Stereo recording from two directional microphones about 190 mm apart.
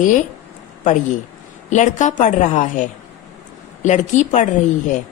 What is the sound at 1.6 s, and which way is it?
A woman's voice, 40° left (ahead or behind).